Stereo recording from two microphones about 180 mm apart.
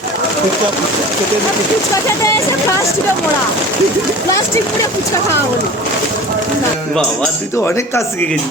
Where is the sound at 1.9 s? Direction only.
15° left (ahead or behind).